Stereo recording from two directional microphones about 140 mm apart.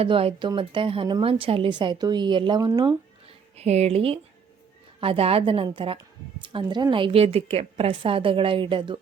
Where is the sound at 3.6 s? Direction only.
50° right (ahead or behind).